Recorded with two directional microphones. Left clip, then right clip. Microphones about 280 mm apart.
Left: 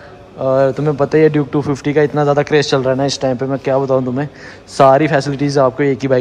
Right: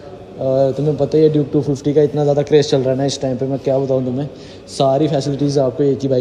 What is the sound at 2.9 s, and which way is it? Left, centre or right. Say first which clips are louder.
Speech: left 3 dB; left.